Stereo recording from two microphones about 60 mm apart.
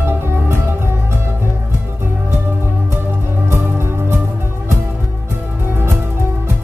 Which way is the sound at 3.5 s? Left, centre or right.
Right.